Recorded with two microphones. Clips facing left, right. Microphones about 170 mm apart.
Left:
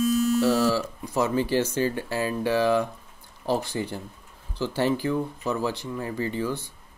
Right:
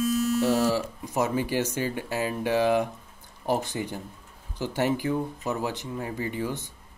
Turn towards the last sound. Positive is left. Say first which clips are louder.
# left 2 dB
turn(degrees=-20)  # may be behind; listen again after turning